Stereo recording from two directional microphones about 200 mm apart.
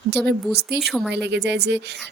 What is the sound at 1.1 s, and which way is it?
Speech, 60° right (ahead or behind).